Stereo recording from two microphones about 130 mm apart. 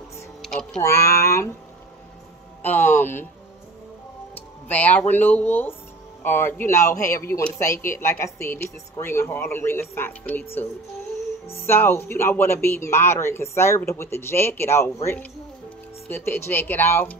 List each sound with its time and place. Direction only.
0.4 s a sound: 5° left (ahead or behind)
0.8 s speech: 20° left (ahead or behind)
2.6 s speech: 15° left (ahead or behind)
4.4 s speech: 15° left (ahead or behind)
11.4 s speech: 20° left (ahead or behind)
16.1 s speech: 15° left (ahead or behind)